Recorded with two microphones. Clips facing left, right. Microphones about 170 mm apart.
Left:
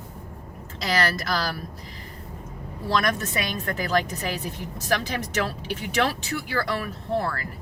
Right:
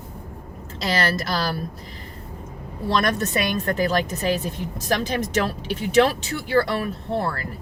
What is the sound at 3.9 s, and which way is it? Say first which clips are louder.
Speech: right 3 dB; 25° right (ahead or behind).